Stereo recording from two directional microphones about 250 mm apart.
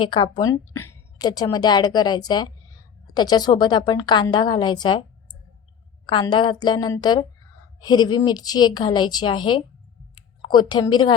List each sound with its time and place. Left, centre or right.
0.0 s a woman's voice: centre
6.1 s a woman's voice: centre